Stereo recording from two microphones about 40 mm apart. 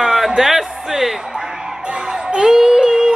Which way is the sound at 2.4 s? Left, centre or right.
Centre.